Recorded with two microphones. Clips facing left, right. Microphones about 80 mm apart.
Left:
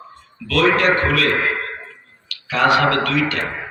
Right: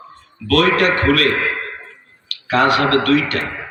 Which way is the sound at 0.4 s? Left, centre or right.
Right.